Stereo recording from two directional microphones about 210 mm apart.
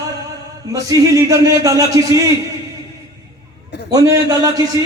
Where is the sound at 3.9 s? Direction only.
15° right (ahead or behind).